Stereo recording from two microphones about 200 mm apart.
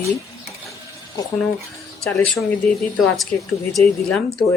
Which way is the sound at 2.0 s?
5° left (ahead or behind).